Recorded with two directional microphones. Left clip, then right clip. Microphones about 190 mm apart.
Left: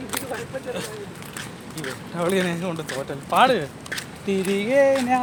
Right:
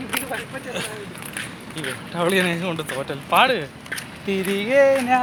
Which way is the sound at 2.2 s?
30° right (ahead or behind).